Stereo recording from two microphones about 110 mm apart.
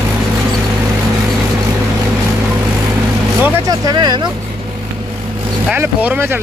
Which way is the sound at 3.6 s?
40° right (ahead or behind).